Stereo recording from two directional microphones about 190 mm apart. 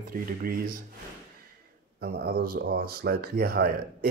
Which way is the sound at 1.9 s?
55° right (ahead or behind).